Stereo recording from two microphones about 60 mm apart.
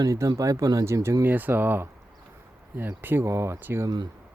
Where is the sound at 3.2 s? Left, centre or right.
Right.